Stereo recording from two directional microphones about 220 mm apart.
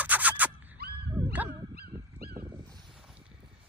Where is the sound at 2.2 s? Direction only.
45° right (ahead or behind).